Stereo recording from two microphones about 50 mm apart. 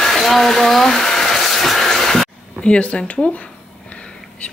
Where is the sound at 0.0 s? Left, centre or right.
Centre.